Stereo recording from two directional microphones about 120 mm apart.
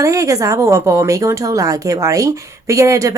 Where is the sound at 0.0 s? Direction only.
25° right (ahead or behind).